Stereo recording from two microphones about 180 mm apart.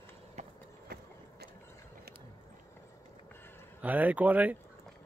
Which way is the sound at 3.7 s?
10° right (ahead or behind).